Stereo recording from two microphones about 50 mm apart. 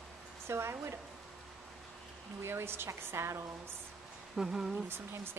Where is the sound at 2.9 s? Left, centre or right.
Right.